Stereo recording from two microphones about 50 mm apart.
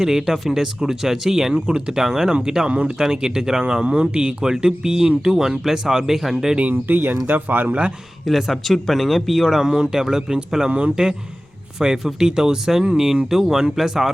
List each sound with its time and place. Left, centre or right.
0.0 s speech: centre
6.6 s speech: right
7.7 s speech: right
8.2 s speech: centre
9.6 s speech: centre